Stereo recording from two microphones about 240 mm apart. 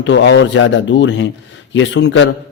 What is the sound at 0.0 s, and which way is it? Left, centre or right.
A man's voice, left.